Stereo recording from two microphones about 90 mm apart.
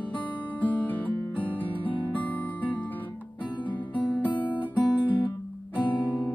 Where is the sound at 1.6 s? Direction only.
70° left (ahead or behind).